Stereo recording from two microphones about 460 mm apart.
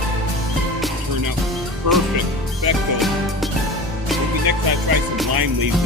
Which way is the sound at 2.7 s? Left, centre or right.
Right.